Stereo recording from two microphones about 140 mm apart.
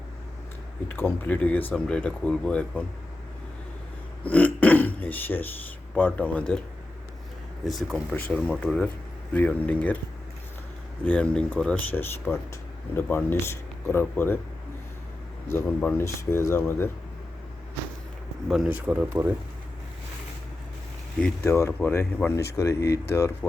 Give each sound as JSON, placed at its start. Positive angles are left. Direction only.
{"t": 0.9, "sound": "speech", "side_deg": 15}
{"t": 4.2, "sound": "burping", "side_deg": 10}
{"t": 5.9, "sound": "speech", "side_deg": 10}
{"t": 7.6, "sound": "speech", "side_deg": 0}
{"t": 11.0, "sound": "speech", "side_deg": 10}
{"t": 15.4, "sound": "speech", "side_deg": 15}
{"t": 18.4, "sound": "speech", "side_deg": -5}
{"t": 21.4, "sound": "speech", "side_deg": 20}